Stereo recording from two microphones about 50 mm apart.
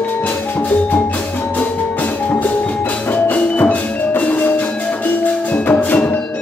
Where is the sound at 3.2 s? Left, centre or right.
Left.